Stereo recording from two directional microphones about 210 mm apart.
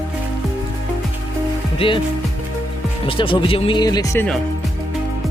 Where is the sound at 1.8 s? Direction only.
25° left (ahead or behind).